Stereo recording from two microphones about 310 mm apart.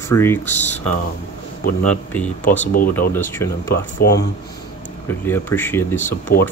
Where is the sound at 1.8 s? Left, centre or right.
Centre.